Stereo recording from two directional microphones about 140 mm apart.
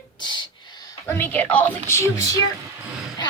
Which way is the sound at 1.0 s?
15° left (ahead or behind).